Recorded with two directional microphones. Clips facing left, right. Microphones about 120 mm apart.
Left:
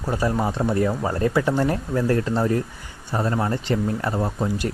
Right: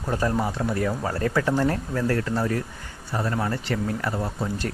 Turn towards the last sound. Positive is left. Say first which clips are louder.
# left 4 dB
turn(degrees=15)  # may be behind; listen again after turning